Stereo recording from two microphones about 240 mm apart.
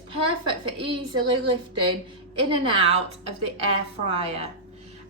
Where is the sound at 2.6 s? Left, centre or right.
Right.